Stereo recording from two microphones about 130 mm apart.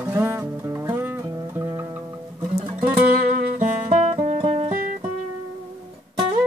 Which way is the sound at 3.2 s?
60° right (ahead or behind).